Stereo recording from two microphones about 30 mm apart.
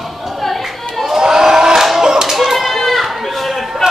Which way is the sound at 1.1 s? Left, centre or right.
Centre.